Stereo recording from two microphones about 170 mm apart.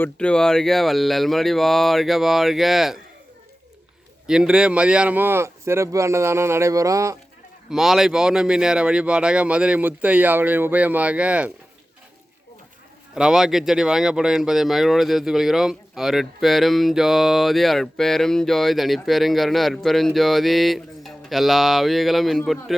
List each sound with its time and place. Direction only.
0.0 s speech: 5° left (ahead or behind)
4.3 s speech: 5° right (ahead or behind)
7.7 s speech: centre (ahead or behind)
13.1 s speech: 5° right (ahead or behind)